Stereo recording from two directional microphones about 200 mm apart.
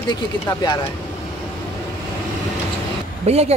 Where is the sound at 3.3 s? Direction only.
30° right (ahead or behind).